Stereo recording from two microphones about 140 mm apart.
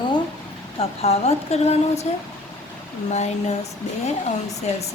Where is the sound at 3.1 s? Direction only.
50° left (ahead or behind).